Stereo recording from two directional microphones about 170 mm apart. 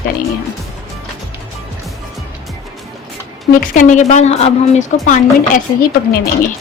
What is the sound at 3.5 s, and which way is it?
A woman's voice, 50° left (ahead or behind).